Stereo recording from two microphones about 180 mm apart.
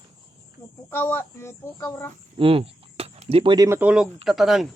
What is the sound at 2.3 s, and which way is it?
Speech, 30° right (ahead or behind).